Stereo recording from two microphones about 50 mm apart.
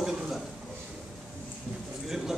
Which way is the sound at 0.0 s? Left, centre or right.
Centre.